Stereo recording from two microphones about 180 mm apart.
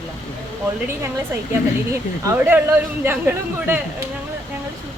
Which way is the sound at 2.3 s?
10° right (ahead or behind).